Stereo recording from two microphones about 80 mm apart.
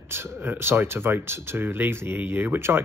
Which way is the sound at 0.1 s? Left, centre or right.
Right.